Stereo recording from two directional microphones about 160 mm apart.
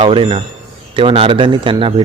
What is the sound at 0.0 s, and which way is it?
Speech, 35° right (ahead or behind).